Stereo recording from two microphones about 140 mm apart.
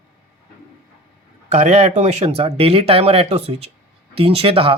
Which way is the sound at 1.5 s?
55° right (ahead or behind).